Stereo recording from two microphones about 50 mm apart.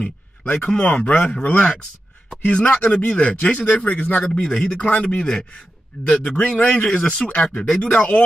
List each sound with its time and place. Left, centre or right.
0.5 s speech: left
4.4 s speech: left